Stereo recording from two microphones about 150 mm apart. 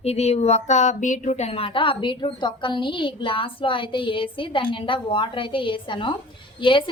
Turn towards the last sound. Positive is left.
turn(degrees=35)  # may be behind; listen again after turning